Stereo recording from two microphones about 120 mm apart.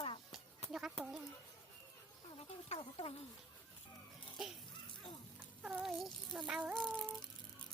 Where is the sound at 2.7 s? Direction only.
55° left (ahead or behind).